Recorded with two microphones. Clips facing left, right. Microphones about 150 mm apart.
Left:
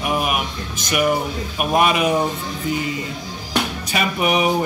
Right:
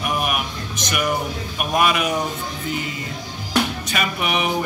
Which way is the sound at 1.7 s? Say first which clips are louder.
Left 3 dB; 30° left (ahead or behind).